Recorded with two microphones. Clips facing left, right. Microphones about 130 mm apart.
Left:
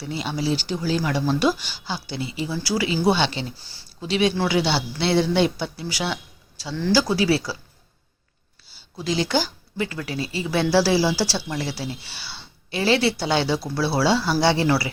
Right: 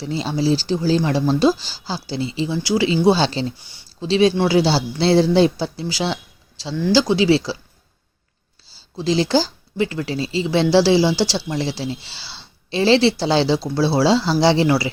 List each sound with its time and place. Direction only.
0.0 s speech: 30° right (ahead or behind)
3.6 s speech: 20° right (ahead or behind)
4.1 s speech: 30° right (ahead or behind)
8.7 s speech: 30° right (ahead or behind)